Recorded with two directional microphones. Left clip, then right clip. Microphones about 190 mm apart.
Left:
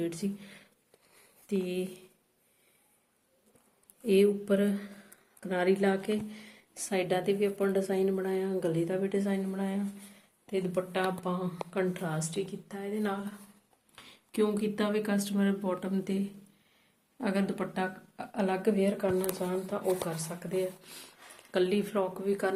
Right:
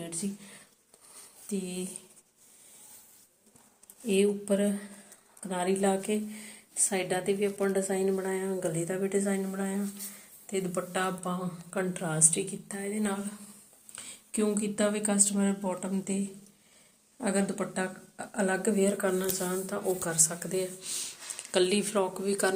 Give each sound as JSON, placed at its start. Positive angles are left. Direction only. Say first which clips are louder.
{"t": 0.0, "sound": "speech", "louder": "left 4 dB", "side_deg": 20}
{"t": 4.0, "sound": "speech", "louder": "left 2 dB", "side_deg": 15}
{"t": 10.5, "sound": "speech", "louder": "even", "side_deg": 5}
{"t": 12.0, "sound": "a woman's voice", "louder": "right 5 dB", "side_deg": -15}
{"t": 13.9, "sound": "speech", "louder": "left 1 dB", "side_deg": 5}